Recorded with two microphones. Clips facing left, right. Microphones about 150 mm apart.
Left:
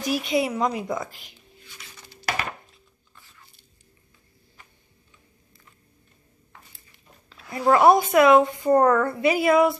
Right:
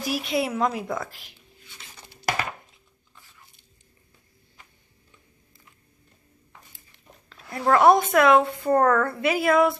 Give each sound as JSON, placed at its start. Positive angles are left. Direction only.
{"t": 0.0, "sound": "speech", "side_deg": 0}
{"t": 7.2, "sound": "speech", "side_deg": 5}
{"t": 8.7, "sound": "a woman's voice", "side_deg": 10}
{"t": 9.1, "sound": "speech", "side_deg": 0}